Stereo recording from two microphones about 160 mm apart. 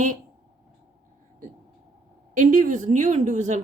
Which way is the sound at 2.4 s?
55° right (ahead or behind).